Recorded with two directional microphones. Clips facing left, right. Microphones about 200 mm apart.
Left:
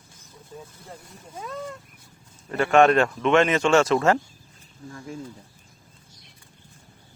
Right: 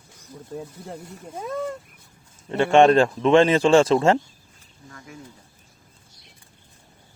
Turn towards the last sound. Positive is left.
turn(degrees=25)  # may be behind; listen again after turning